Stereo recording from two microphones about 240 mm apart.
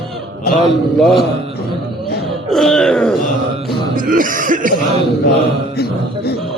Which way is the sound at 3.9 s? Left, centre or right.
Right.